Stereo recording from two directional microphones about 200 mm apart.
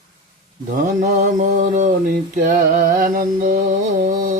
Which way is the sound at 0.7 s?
40° right (ahead or behind).